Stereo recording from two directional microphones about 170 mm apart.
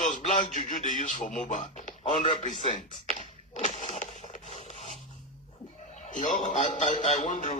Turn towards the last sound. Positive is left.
turn(degrees=50)  # may be behind; listen again after turning